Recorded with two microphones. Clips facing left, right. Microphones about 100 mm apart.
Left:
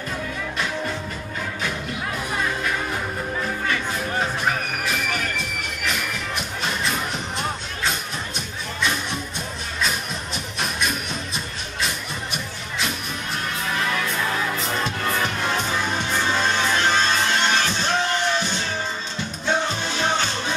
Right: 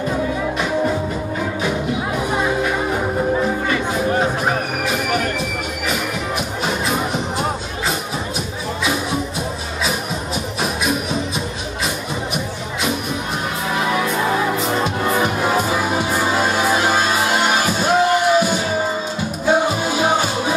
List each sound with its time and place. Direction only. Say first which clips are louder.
0.1 s music: right 9 dB; 20° right (ahead or behind)
2.3 s music: right 6 dB; 15° right (ahead or behind)
4.8 s train: right 7 dB; 5° right (ahead or behind)
5.9 s music: right 4 dB; 5° right (ahead or behind)
10.6 s music: right 5 dB; 5° right (ahead or behind)
13.7 s music: right 6 dB; 15° right (ahead or behind)